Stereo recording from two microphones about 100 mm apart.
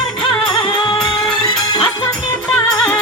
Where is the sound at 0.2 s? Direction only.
50° left (ahead or behind).